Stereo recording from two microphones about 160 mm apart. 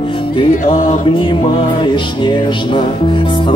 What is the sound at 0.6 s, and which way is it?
Mantra, 60° left (ahead or behind).